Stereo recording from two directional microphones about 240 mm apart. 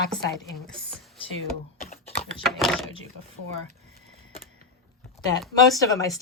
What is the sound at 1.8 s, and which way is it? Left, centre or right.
Typing, left.